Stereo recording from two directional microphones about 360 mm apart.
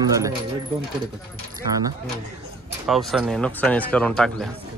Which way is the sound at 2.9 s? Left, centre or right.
Centre.